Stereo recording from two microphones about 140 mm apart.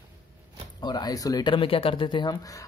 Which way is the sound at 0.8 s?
30° left (ahead or behind).